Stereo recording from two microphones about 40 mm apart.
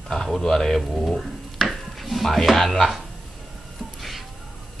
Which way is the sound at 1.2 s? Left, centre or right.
Centre.